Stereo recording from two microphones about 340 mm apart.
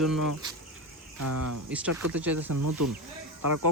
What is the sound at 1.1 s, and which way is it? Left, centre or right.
Speech, right.